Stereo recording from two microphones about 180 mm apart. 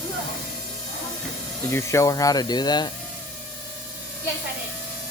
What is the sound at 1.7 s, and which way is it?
Speech, 15° left (ahead or behind).